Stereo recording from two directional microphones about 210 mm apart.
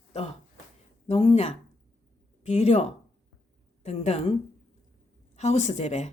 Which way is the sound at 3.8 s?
30° left (ahead or behind).